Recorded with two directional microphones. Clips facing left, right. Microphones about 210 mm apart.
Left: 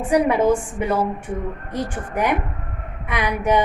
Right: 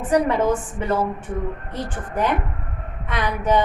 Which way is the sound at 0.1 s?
10° left (ahead or behind).